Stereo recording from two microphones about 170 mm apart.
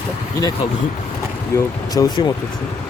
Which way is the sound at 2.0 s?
20° left (ahead or behind).